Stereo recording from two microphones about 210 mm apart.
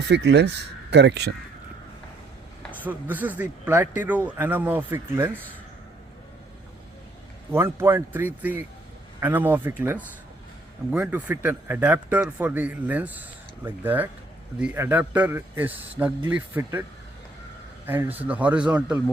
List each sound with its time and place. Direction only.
0.1 s speech: 55° right (ahead or behind)
2.8 s a man's voice: 10° right (ahead or behind)
7.5 s a man's voice: 10° right (ahead or behind)
17.8 s a man's voice: 10° right (ahead or behind)